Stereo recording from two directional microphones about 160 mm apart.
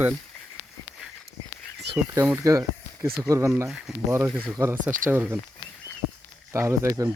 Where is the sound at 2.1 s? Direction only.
15° right (ahead or behind).